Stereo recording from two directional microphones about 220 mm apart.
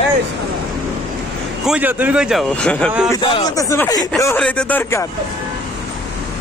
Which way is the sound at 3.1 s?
15° left (ahead or behind).